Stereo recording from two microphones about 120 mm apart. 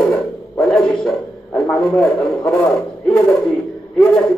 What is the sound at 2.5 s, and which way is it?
Speech, 20° left (ahead or behind).